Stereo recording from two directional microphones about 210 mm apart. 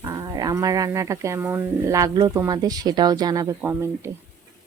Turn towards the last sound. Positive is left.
turn(degrees=-10)  # may be behind; listen again after turning